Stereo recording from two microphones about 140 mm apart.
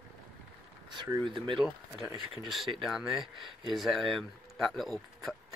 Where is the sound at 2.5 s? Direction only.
Centre (ahead or behind).